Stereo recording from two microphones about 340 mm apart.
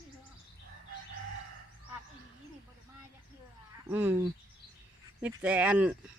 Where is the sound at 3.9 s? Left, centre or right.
Centre.